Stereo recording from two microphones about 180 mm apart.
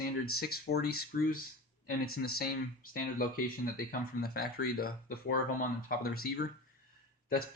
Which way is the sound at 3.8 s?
60° left (ahead or behind).